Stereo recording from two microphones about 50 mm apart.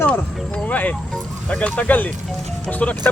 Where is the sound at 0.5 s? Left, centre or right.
Left.